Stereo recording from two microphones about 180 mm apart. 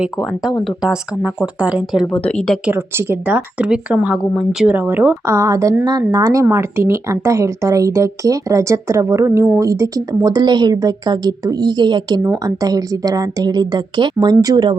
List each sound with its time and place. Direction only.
0.0 s speech: 5° right (ahead or behind)
2.6 s speech: 10° right (ahead or behind)